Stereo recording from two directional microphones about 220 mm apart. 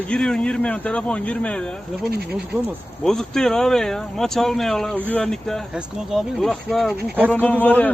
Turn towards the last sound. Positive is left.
turn(degrees=10)  # may be behind; listen again after turning